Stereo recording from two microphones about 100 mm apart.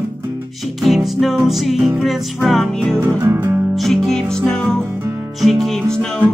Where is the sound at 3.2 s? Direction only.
20° right (ahead or behind).